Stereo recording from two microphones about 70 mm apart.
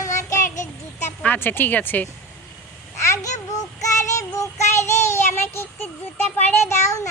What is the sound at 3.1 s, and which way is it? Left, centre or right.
Babbling, left.